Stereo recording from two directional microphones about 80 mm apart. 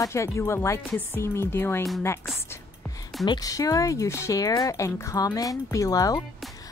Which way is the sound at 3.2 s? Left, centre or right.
Left.